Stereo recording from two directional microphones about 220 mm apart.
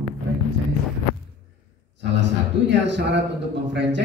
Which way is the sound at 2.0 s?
55° right (ahead or behind).